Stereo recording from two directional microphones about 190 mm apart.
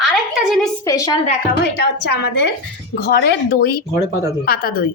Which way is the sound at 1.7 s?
60° left (ahead or behind).